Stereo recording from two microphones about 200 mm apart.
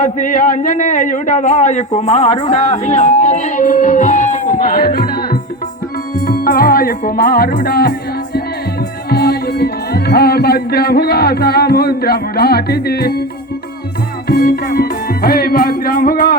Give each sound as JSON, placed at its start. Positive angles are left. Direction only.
{"t": 0.0, "sound": "a man's voice", "side_deg": 40}
{"t": 6.2, "sound": "music", "side_deg": 45}
{"t": 9.0, "sound": "music", "side_deg": 50}
{"t": 14.3, "sound": "music", "side_deg": 50}